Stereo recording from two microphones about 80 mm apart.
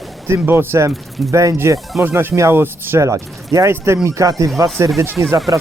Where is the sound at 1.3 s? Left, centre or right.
Right.